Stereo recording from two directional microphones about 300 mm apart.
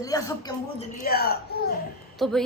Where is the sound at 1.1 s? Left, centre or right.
Left.